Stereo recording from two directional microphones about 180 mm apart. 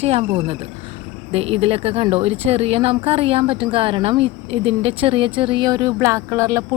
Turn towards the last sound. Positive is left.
turn(degrees=-15)  # may be behind; listen again after turning